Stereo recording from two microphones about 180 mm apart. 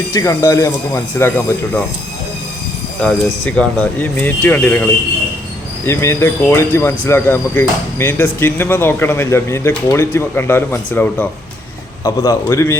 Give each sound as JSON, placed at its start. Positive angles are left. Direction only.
{"t": 0.1, "sound": "speech", "side_deg": 20}
{"t": 3.0, "sound": "speech", "side_deg": 5}